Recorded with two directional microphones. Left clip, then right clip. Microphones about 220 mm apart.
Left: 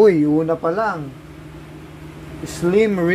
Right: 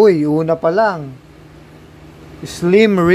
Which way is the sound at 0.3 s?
35° right (ahead or behind).